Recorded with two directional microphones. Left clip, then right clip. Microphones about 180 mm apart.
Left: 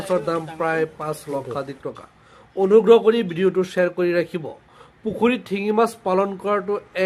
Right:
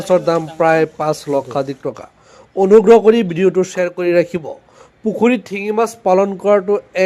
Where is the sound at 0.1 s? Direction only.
40° right (ahead or behind).